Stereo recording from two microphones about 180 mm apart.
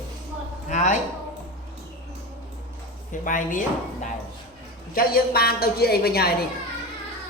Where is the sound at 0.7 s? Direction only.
40° left (ahead or behind).